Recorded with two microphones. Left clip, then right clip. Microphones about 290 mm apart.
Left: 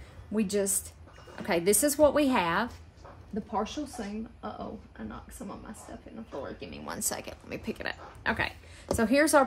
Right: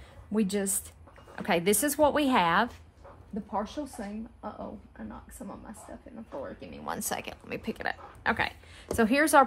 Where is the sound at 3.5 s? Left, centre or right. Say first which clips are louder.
Left 1 dB; centre.